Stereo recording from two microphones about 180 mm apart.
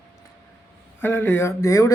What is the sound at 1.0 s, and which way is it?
Speech, 10° left (ahead or behind).